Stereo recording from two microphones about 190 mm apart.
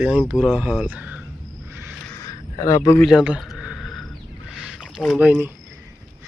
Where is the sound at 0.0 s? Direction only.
5° right (ahead or behind).